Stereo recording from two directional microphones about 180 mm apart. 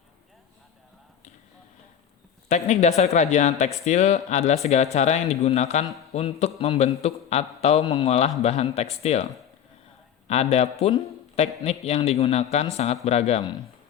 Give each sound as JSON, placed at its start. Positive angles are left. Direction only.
{"t": 2.5, "sound": "a man's voice", "side_deg": 40}
{"t": 10.2, "sound": "speech", "side_deg": 35}